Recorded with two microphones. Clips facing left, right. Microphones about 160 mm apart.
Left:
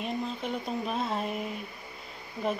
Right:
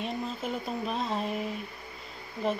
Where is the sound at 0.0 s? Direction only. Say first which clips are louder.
Left 1 dB; centre (ahead or behind).